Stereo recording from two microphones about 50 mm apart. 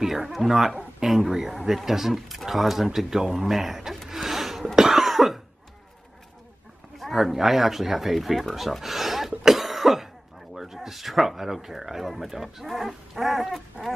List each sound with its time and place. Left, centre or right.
0.0 s speech: centre
3.4 s a sound: centre
4.7 s cough: centre
7.0 s speech: centre
9.4 s cough: centre
10.5 s speech: centre